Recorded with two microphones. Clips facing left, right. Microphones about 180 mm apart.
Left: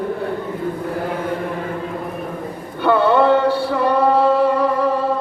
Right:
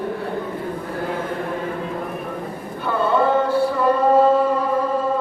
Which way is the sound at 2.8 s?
70° left (ahead or behind).